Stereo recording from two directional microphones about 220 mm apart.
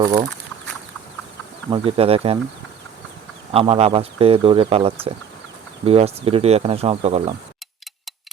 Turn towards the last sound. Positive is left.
turn(degrees=-25)  # may be behind; listen again after turning